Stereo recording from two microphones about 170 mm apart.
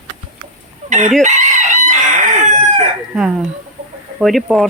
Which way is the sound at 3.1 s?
5° right (ahead or behind).